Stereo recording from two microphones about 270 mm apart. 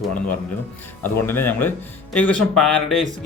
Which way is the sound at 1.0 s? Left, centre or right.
Centre.